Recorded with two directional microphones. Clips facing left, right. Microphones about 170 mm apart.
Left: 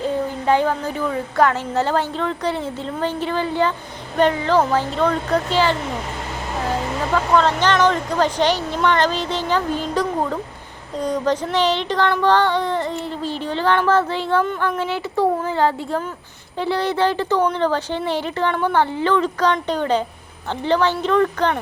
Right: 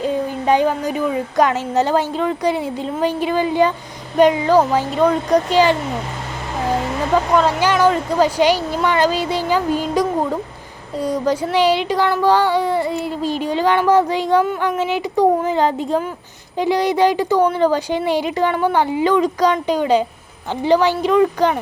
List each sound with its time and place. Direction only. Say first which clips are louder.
0.0 s female singing: right 2 dB; 15° right (ahead or behind)
7.1 s female singing: right 2 dB; 10° right (ahead or behind)